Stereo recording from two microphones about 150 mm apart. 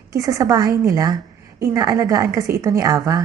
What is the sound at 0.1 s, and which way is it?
A woman's voice, 20° right (ahead or behind).